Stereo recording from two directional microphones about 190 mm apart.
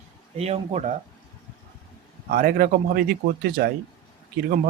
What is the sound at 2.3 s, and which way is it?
Speech, 50° right (ahead or behind).